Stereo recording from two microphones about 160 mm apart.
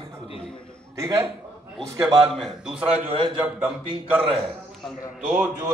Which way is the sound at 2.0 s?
Centre (ahead or behind).